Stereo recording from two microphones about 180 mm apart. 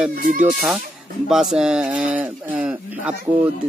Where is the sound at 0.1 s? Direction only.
55° right (ahead or behind).